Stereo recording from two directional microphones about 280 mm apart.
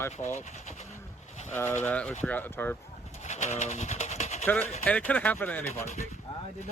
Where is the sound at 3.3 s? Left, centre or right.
Left.